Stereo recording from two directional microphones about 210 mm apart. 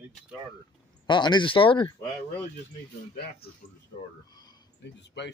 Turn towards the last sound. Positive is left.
turn(degrees=55)  # may be behind; listen again after turning